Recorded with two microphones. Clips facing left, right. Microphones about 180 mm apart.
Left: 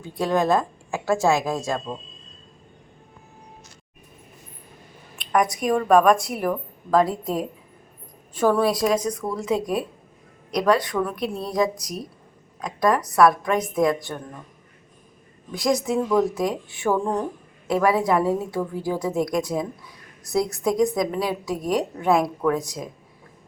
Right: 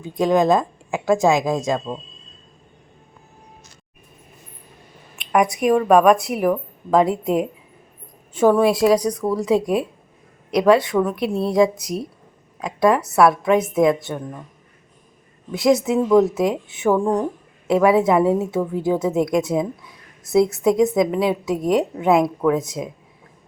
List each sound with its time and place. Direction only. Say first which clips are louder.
0.0 s speech: right 5 dB; 15° right (ahead or behind)
5.6 s a woman's voice: right 3 dB; 5° right (ahead or behind)
6.9 s a woman's voice: right 4 dB; 20° right (ahead or behind)
14.1 s speech: right 5 dB; 10° right (ahead or behind)
15.5 s a woman's voice: right 5 dB; 25° right (ahead or behind)
20.7 s a woman's voice: even; 5° right (ahead or behind)
21.2 s a woman's voice: right 5 dB; 25° right (ahead or behind)